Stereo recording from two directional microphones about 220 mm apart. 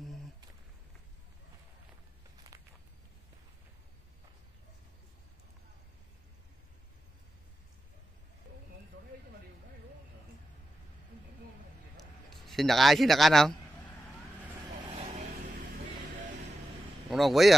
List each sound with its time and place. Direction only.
2.4 s walk: 15° right (ahead or behind)
12.0 s a sound: centre (ahead or behind)
14.9 s vehicle: 30° right (ahead or behind)
17.1 s speech: centre (ahead or behind)